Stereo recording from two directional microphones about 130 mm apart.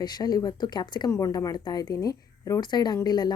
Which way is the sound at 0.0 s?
30° left (ahead or behind).